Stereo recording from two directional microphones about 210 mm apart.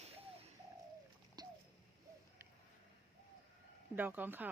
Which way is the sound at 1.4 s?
20° right (ahead or behind).